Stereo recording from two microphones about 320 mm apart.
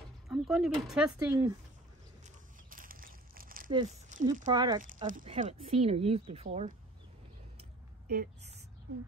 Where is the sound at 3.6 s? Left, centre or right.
Centre.